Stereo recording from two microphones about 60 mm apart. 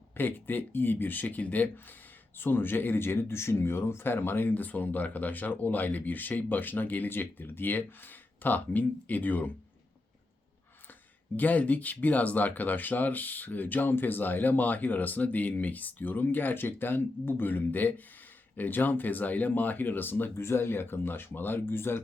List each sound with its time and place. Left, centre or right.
0.2 s speech: left
11.3 s speech: left
20.4 s speech: left